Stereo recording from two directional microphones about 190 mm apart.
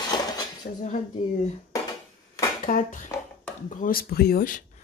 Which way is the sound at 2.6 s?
45° left (ahead or behind).